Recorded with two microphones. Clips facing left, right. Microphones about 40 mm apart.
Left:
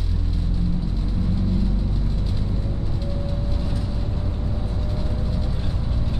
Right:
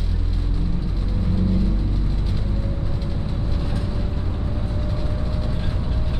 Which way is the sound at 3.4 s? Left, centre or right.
Centre.